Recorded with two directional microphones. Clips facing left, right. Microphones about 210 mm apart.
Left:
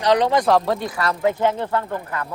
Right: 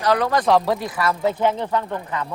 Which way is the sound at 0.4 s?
Centre (ahead or behind).